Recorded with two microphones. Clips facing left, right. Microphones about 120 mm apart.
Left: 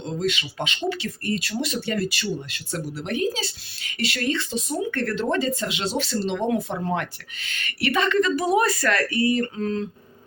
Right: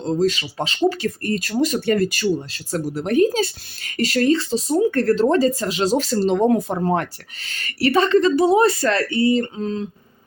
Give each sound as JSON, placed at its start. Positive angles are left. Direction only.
{"t": 0.0, "sound": "speech", "side_deg": -35}
{"t": 2.2, "sound": "speech", "side_deg": -35}